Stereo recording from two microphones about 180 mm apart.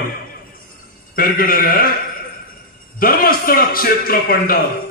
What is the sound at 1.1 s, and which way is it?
Speech, 55° left (ahead or behind).